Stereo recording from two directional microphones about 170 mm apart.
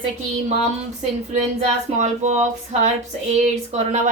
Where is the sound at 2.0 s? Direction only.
40° right (ahead or behind).